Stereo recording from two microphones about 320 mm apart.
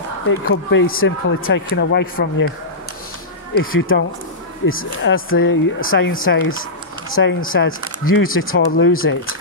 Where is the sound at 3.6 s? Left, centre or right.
Left.